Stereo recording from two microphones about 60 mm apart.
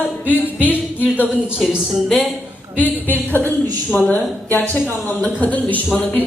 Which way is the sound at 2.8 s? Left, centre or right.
Left.